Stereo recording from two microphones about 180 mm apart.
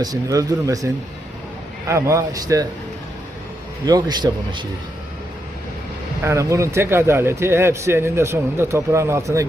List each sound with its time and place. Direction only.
0.0 s speech: 20° right (ahead or behind)
1.9 s speech: 15° right (ahead or behind)
3.8 s speech: 20° right (ahead or behind)
6.2 s speech: 15° right (ahead or behind)